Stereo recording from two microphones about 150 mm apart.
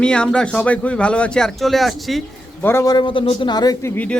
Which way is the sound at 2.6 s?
15° left (ahead or behind).